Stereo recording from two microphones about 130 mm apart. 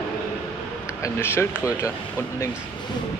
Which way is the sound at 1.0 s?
20° left (ahead or behind).